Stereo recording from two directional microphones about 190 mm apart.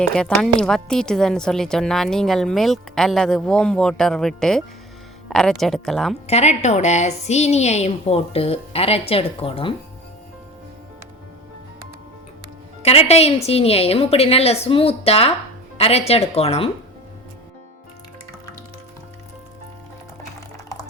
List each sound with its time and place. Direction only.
0.0 s a woman's voice: 5° left (ahead or behind)
6.2 s a woman's voice: 35° left (ahead or behind)
12.8 s a woman's voice: 35° left (ahead or behind)